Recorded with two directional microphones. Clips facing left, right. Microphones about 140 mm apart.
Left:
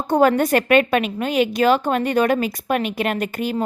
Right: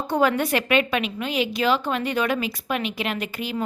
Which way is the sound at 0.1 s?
45° left (ahead or behind).